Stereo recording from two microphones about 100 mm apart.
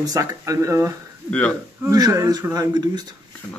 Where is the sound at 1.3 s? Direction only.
15° left (ahead or behind).